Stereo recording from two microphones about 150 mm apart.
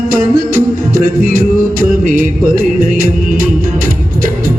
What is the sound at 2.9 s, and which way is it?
Music, 75° right (ahead or behind).